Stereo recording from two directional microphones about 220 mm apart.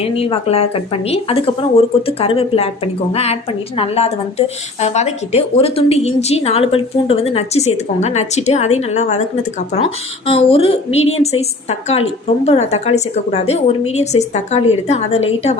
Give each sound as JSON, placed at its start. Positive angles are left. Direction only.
{"t": 0.0, "sound": "speech", "side_deg": 25}